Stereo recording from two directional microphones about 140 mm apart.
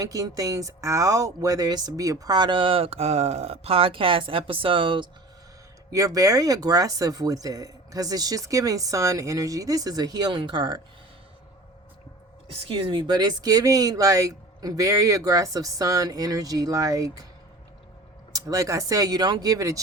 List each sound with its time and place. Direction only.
0.0 s speech: 25° right (ahead or behind)
5.9 s speech: 25° right (ahead or behind)
12.5 s speech: 40° right (ahead or behind); by 17.2 s 25° right (ahead or behind)
18.3 s speech: 25° right (ahead or behind)